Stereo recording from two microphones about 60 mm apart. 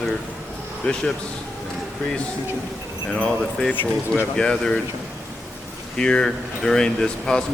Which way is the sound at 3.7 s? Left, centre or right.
Left.